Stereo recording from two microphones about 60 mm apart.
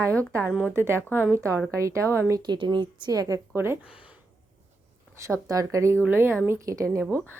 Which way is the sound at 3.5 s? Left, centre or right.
Right.